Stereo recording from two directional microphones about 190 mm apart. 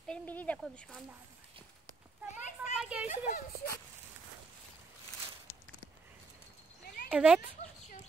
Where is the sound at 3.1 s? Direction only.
40° left (ahead or behind).